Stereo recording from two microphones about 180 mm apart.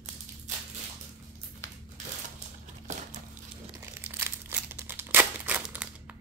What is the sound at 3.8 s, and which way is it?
Crumpling, 15° right (ahead or behind).